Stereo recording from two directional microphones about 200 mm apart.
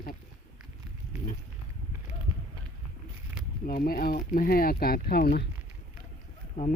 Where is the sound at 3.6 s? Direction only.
45° left (ahead or behind).